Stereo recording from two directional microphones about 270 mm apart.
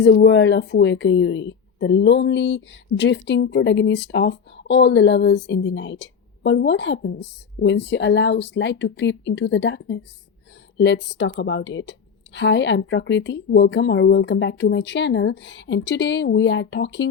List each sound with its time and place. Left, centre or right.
0.0 s speech: left